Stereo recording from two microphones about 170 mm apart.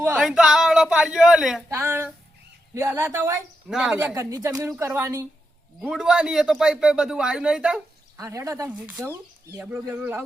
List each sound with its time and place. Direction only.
0.0 s speech: 5° right (ahead or behind)
1.7 s a woman's voice: 15° right (ahead or behind)
3.7 s speech: centre (ahead or behind)
3.9 s a woman's voice: 15° right (ahead or behind)
5.8 s speech: 5° right (ahead or behind)
8.2 s a woman's voice: 20° right (ahead or behind)
8.7 s a woman's voice: 5° right (ahead or behind)